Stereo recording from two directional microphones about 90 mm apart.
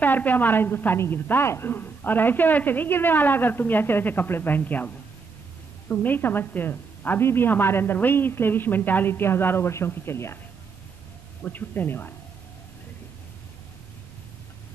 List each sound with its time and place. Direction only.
0.0 s a woman's voice: 20° left (ahead or behind)
11.4 s a woman's voice: 20° left (ahead or behind)